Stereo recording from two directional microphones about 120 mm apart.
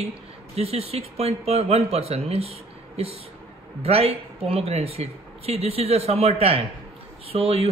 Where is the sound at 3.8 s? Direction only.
55° right (ahead or behind).